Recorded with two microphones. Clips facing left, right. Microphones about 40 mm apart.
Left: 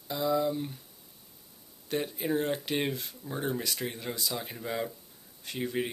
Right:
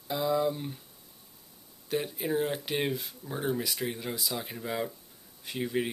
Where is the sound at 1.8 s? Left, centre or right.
Centre.